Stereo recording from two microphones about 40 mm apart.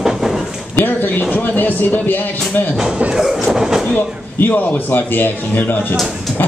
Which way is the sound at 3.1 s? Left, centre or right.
Centre.